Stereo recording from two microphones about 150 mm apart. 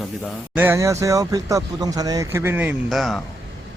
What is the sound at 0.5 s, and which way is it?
Speech, 15° right (ahead or behind).